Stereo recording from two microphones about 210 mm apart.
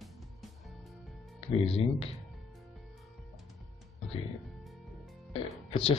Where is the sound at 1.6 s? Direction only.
25° left (ahead or behind).